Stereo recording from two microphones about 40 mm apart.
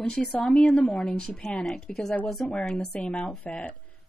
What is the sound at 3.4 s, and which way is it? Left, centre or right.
Speech, left.